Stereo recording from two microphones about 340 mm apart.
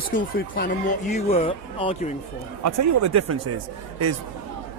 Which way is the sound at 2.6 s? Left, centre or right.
Right.